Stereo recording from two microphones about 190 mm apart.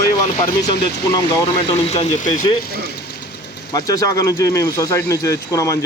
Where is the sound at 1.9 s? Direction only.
35° left (ahead or behind).